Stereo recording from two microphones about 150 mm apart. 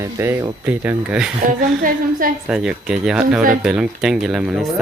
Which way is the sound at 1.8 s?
65° right (ahead or behind).